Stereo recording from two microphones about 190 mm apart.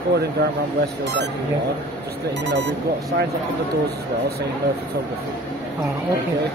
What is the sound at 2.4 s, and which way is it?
Speech, 65° right (ahead or behind).